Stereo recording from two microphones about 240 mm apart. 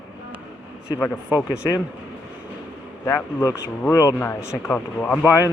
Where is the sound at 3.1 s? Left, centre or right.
Centre.